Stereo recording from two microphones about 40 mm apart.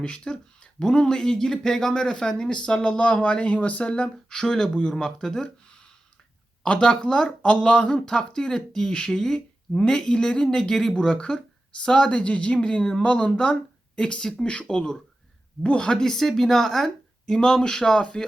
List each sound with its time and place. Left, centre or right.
0.0 s speech: left
6.7 s speech: left